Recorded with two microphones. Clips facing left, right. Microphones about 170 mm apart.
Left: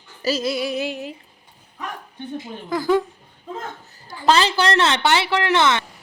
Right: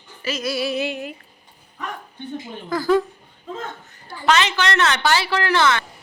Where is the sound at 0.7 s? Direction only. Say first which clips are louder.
Right 1 dB; 65° right (ahead or behind).